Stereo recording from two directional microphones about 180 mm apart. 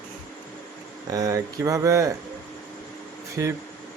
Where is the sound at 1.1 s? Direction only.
20° right (ahead or behind).